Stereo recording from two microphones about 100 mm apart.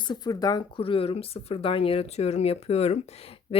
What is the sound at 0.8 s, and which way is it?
Speech, 65° left (ahead or behind).